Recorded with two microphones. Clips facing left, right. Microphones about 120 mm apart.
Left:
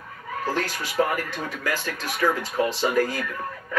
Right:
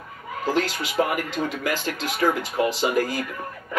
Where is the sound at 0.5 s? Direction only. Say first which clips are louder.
Right 4 dB; 20° right (ahead or behind).